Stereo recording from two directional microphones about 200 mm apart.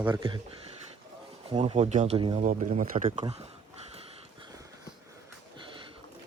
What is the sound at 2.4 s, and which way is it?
Speech, 40° right (ahead or behind).